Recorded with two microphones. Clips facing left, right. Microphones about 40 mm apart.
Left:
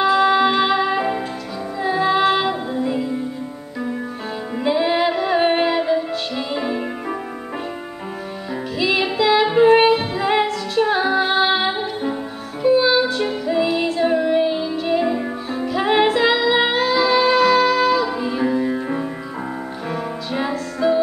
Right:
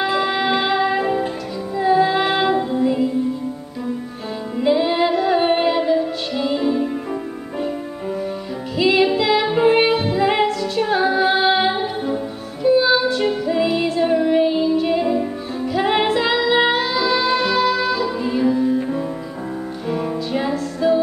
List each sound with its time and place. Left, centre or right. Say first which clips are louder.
0.2 s music: left 4 dB; centre
0.9 s music: right 2 dB; centre
2.2 s child singing: even; centre
4.6 s music: right 1 dB; centre
8.9 s music: left 1 dB; centre
18.4 s music: right 3 dB; left
20.3 s music: left 1 dB; centre